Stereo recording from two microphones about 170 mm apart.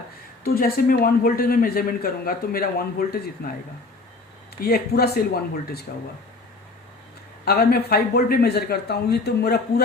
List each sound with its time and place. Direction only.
0.4 s speech: 60° left (ahead or behind)
4.6 s speech: 65° left (ahead or behind)
7.4 s speech: 65° left (ahead or behind)